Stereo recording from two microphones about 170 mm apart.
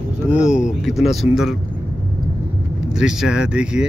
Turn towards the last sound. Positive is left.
turn(degrees=-5)  # may be behind; listen again after turning